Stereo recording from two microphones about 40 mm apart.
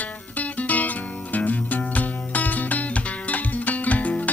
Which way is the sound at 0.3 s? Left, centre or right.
Left.